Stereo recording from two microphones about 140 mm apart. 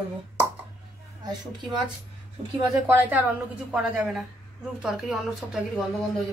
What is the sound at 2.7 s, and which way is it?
A woman's voice, 15° right (ahead or behind).